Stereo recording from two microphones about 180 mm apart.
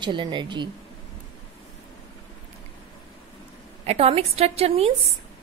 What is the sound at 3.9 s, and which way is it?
A woman's voice, 35° right (ahead or behind).